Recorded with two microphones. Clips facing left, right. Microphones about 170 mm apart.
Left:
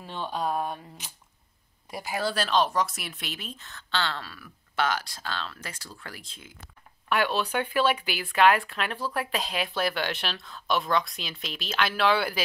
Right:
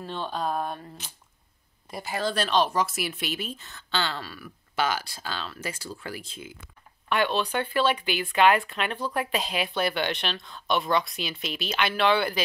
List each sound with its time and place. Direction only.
0.0 s speech: 10° left (ahead or behind); by 6.5 s 5° right (ahead or behind)
7.1 s speech: 5° left (ahead or behind)